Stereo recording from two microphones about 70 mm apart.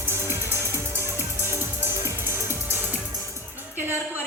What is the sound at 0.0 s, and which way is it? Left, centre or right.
Music, right.